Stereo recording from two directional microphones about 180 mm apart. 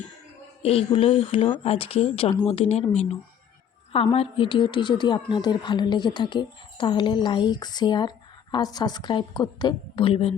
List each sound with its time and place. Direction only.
0.6 s a woman's voice: 35° left (ahead or behind)